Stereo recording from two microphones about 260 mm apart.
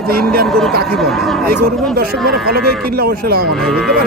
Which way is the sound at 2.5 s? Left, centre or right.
Right.